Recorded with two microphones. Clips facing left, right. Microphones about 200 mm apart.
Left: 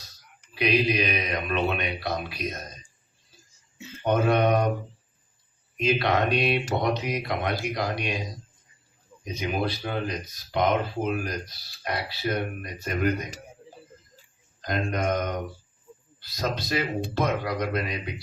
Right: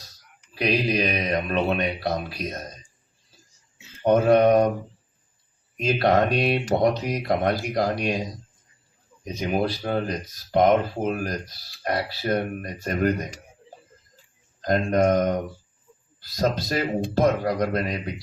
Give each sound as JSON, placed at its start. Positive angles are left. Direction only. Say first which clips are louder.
{"t": 0.5, "sound": "speech", "louder": "right 1 dB", "side_deg": -40}
{"t": 4.0, "sound": "speech", "louder": "right 5 dB", "side_deg": -40}
{"t": 5.7, "sound": "speech", "louder": "right 4 dB", "side_deg": -45}
{"t": 9.2, "sound": "speech", "louder": "right 3 dB", "side_deg": -40}
{"t": 14.6, "sound": "speech", "louder": "right 7 dB", "side_deg": -40}